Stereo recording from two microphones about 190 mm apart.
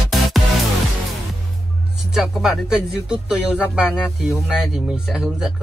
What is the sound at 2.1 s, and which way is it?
Speech, centre (ahead or behind).